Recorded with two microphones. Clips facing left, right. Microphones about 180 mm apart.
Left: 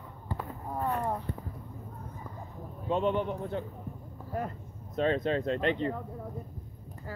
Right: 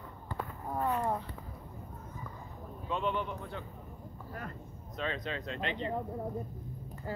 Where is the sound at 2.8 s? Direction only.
45° left (ahead or behind).